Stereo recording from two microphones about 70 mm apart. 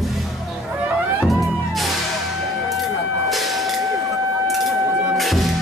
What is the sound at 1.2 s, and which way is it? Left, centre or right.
Music, centre.